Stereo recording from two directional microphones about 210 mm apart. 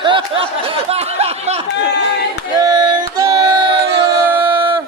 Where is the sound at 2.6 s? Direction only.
20° right (ahead or behind).